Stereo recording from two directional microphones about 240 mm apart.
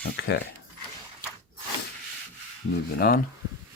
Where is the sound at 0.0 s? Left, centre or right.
Left.